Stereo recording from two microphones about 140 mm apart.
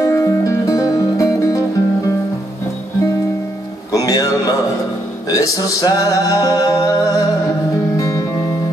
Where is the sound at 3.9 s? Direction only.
25° left (ahead or behind).